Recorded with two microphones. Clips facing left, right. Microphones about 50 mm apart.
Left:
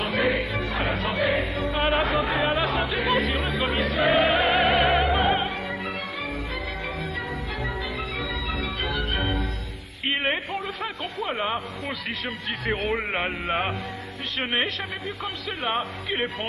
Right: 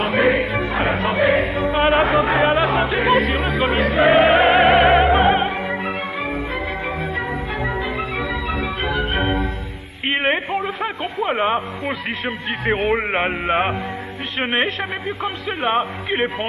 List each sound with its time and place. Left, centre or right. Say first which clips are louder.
0.1 s music: right 7 dB; right
2.0 s chatter: right 7 dB; right
3.1 s chatter: right 6 dB; centre
3.9 s music: right 8 dB; right
4.6 s opera: right 8 dB; centre
7.0 s music: right 7 dB; right
10.0 s a sound: right 6 dB; right
12.3 s a man's voice: right 7 dB; right